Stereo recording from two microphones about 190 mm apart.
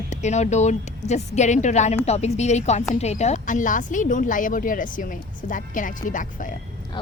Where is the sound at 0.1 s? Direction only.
35° left (ahead or behind).